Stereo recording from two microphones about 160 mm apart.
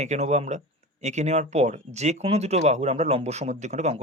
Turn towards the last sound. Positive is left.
turn(degrees=-45)  # may be behind; listen again after turning